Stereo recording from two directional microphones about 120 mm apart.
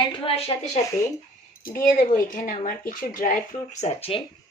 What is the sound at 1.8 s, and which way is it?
Speech, 90° left.